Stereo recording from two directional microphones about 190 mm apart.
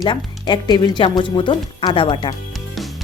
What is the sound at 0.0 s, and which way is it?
Speech, 25° left (ahead or behind).